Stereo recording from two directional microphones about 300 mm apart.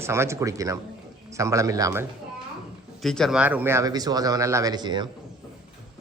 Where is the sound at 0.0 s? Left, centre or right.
Centre.